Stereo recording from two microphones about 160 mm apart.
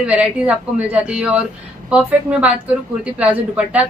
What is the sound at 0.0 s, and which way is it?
A woman's voice, 5° right (ahead or behind).